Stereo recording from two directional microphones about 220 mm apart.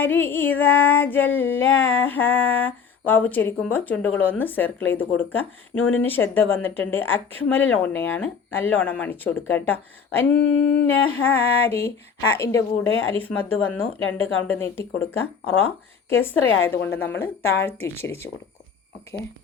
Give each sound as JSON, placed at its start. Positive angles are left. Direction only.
{"t": 0.0, "sound": "female singing", "side_deg": 10}
{"t": 10.3, "sound": "a sound", "side_deg": 55}
{"t": 10.8, "sound": "female singing", "side_deg": 10}